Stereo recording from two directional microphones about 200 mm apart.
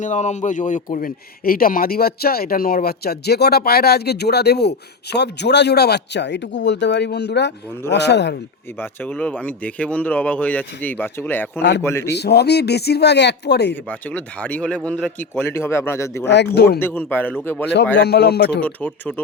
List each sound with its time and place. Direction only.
0.0 s speech: 35° left (ahead or behind); by 8.4 s 60° left (ahead or behind)
8.8 s speech: 10° left (ahead or behind)
12.1 s speech: 55° left (ahead or behind)
13.8 s speech: 5° left (ahead or behind)
16.2 s speech: 60° left (ahead or behind)
16.8 s speech: 10° left (ahead or behind)
17.9 s speech: 55° left (ahead or behind)
18.6 s speech: 10° left (ahead or behind)